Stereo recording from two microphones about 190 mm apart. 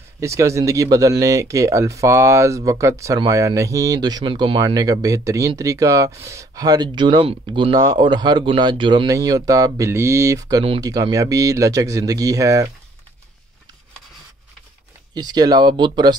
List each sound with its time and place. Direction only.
0.2 s speech: 15° right (ahead or behind)
15.1 s speech: 20° right (ahead or behind)